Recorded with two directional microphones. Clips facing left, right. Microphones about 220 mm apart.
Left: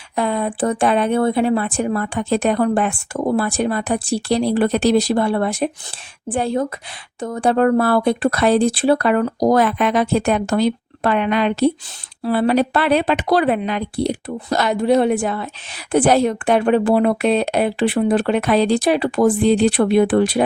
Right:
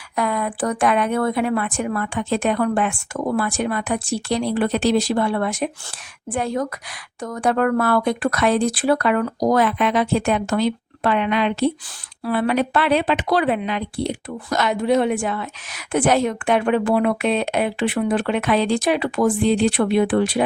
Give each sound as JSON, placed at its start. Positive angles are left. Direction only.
{"t": 0.2, "sound": "a woman's voice", "side_deg": 30}